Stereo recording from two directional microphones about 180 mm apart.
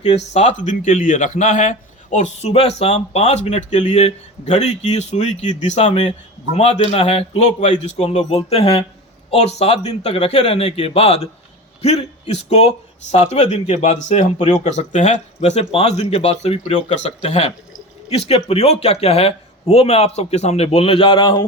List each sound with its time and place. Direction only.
0.0 s speech: 35° left (ahead or behind)